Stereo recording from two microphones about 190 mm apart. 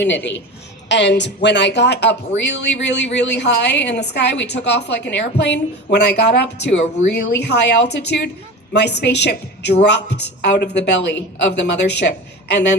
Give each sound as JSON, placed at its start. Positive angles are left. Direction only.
{"t": 0.9, "sound": "speech", "side_deg": 70}